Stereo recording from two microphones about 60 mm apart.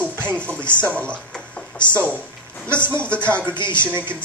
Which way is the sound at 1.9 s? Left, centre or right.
Right.